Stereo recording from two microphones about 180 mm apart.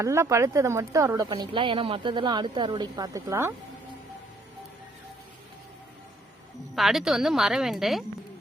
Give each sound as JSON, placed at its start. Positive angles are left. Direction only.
{"t": 0.0, "sound": "a woman's voice", "side_deg": -15}
{"t": 6.7, "sound": "a woman's voice", "side_deg": 0}